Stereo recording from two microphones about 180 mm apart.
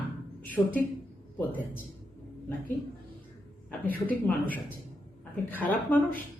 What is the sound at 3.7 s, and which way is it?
Speech, 10° left (ahead or behind).